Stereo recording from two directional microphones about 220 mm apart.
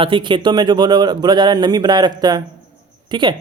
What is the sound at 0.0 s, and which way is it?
Speech, 20° right (ahead or behind).